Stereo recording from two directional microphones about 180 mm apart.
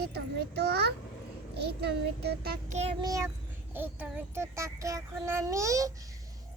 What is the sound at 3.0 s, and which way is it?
Speech, 20° right (ahead or behind).